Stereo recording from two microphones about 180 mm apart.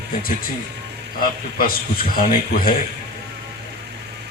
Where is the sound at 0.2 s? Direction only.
55° left (ahead or behind).